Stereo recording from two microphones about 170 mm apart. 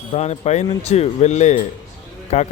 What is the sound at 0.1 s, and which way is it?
Speech, 40° left (ahead or behind).